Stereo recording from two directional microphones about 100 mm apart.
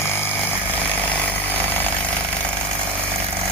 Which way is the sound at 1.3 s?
20° right (ahead or behind).